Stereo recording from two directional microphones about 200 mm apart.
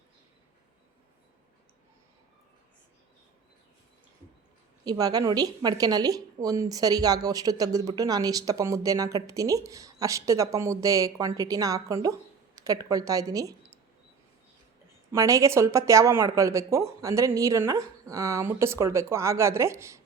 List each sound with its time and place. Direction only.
4.9 s a woman's voice: 20° right (ahead or behind)
15.1 s a woman's voice: 15° right (ahead or behind)